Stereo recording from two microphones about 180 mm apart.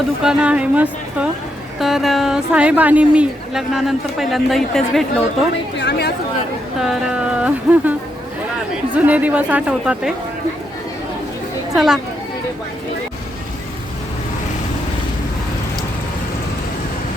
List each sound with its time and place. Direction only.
0.2 s speech: 5° right (ahead or behind)
5.8 s speech: 65° left (ahead or behind)
6.8 s speech: 5° right (ahead or behind)
9.0 s speech: 10° right (ahead or behind)
11.7 s speech: centre (ahead or behind)